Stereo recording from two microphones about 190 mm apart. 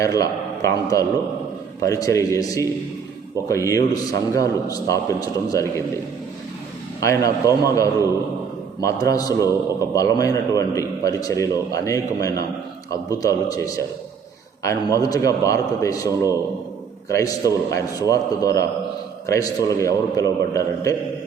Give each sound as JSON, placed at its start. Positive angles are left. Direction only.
{"t": 0.0, "sound": "a man's voice", "side_deg": 15}
{"t": 7.0, "sound": "a man's voice", "side_deg": 15}